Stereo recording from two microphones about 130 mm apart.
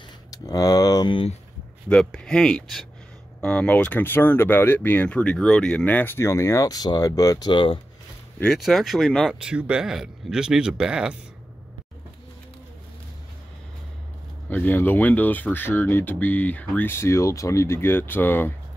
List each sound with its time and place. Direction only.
0.3 s a sound: 30° left (ahead or behind)
1.9 s speech: 5° left (ahead or behind); by 7.8 s 40° left (ahead or behind)
8.4 s speech: centre (ahead or behind)
9.3 s speech: 10° right (ahead or behind)
14.5 s speech: 15° left (ahead or behind)